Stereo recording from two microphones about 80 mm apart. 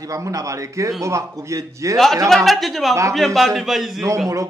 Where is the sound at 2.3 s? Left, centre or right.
Centre.